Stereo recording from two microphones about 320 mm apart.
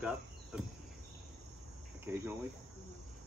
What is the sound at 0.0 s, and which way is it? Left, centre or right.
Cricket, centre.